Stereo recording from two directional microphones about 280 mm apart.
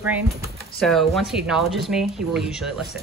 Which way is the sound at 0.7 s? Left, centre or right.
Centre.